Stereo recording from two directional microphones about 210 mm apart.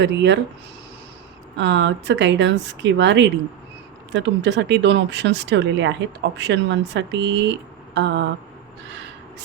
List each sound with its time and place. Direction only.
0.0 s speech: 55° right (ahead or behind)
1.5 s speech: 60° right (ahead or behind)